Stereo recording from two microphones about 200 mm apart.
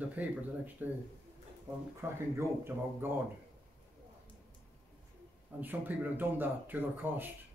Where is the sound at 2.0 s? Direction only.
10° right (ahead or behind).